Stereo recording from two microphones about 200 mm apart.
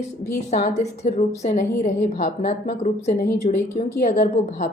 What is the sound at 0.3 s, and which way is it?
Speech, 50° left (ahead or behind).